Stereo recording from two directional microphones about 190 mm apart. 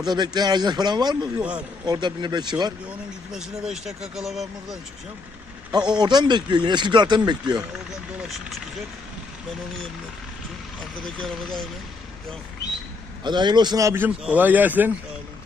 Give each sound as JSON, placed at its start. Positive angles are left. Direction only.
{"t": 0.0, "sound": "speech", "side_deg": -20}
{"t": 3.3, "sound": "speech", "side_deg": 0}
{"t": 6.0, "sound": "speech", "side_deg": -25}
{"t": 11.0, "sound": "speech", "side_deg": 0}
{"t": 13.2, "sound": "speech", "side_deg": -25}